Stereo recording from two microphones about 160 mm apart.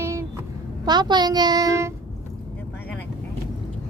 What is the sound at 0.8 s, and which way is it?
A woman's voice, 25° right (ahead or behind).